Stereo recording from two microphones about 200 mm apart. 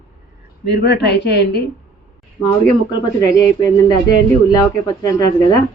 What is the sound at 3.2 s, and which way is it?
Speech, 20° left (ahead or behind).